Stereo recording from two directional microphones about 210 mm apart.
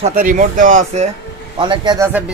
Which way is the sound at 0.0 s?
40° right (ahead or behind).